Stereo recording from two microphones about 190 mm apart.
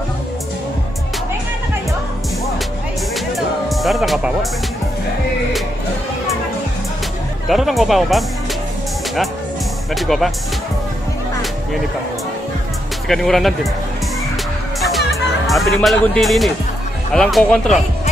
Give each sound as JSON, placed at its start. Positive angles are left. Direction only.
{"t": 3.3, "sound": "music", "side_deg": 0}
{"t": 7.4, "sound": "speech", "side_deg": 0}
{"t": 9.9, "sound": "speech", "side_deg": 0}
{"t": 13.1, "sound": "speech", "side_deg": 0}
{"t": 14.8, "sound": "music", "side_deg": 0}
{"t": 17.1, "sound": "speech", "side_deg": 0}